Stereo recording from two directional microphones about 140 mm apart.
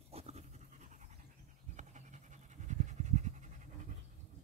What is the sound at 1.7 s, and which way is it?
Pant, 55° right (ahead or behind).